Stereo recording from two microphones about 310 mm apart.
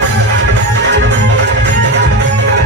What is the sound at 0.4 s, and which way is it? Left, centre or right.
Music, right.